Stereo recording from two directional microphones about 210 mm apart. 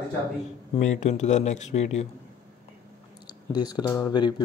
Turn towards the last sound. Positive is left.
turn(degrees=20)  # may be behind; listen again after turning